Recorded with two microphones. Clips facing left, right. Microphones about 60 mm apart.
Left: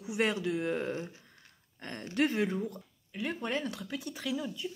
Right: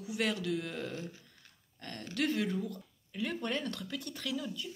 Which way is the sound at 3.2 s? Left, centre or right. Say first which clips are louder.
Left 1 dB; centre.